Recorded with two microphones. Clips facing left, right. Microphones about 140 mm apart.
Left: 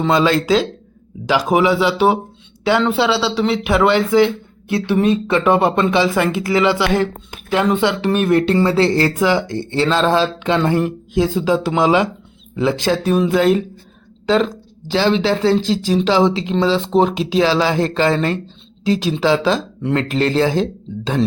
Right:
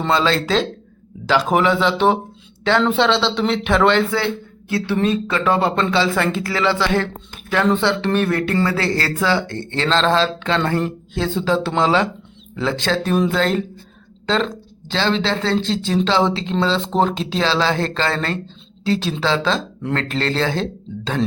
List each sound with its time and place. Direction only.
0.1 s speech: 15° left (ahead or behind)